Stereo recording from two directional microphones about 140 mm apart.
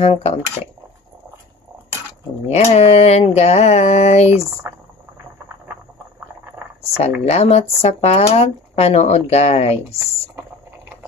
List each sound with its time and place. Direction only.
0.0 s speech: 45° left (ahead or behind)
2.4 s speech: 50° left (ahead or behind)
5.7 s a sound: 15° right (ahead or behind)
7.0 s speech: 50° left (ahead or behind)